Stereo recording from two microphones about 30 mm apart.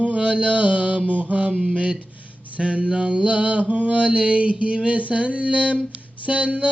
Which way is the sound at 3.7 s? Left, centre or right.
Right.